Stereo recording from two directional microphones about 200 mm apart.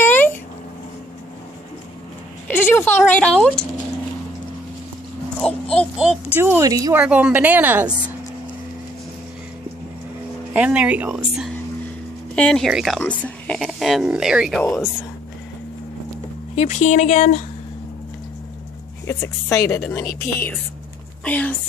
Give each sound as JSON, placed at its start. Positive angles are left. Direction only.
{"t": 0.0, "sound": "a sound", "side_deg": 10}
{"t": 2.4, "sound": "a sound", "side_deg": 10}
{"t": 3.1, "sound": "speech", "side_deg": 5}
{"t": 5.4, "sound": "a child's voice", "side_deg": 5}
{"t": 10.5, "sound": "speech", "side_deg": -5}
{"t": 16.5, "sound": "speech", "side_deg": 35}
{"t": 19.0, "sound": "a woman's voice", "side_deg": 15}